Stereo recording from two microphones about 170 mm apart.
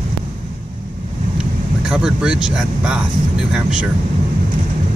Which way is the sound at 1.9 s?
5° right (ahead or behind).